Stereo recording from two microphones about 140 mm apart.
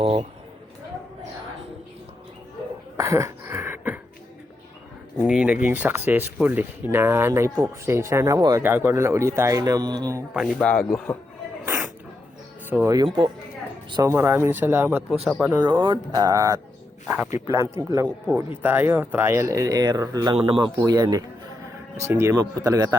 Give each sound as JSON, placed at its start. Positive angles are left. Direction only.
{"t": 0.0, "sound": "speech", "side_deg": -45}
{"t": 3.0, "sound": "a sound", "side_deg": -20}
{"t": 5.2, "sound": "speech", "side_deg": -5}
{"t": 10.6, "sound": "speech", "side_deg": 5}
{"t": 11.6, "sound": "sneeze", "side_deg": -15}
{"t": 12.7, "sound": "speech", "side_deg": -20}
{"t": 13.1, "sound": "speech", "side_deg": -40}
{"t": 14.0, "sound": "speech", "side_deg": -20}
{"t": 15.8, "sound": "speech", "side_deg": -30}
{"t": 20.3, "sound": "speech", "side_deg": -40}
{"t": 20.8, "sound": "speech", "side_deg": -25}